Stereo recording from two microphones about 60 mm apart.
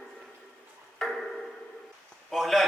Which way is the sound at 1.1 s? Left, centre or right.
Centre.